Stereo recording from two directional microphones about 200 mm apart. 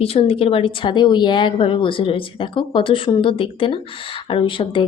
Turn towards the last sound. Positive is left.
turn(degrees=25)  # may be behind; listen again after turning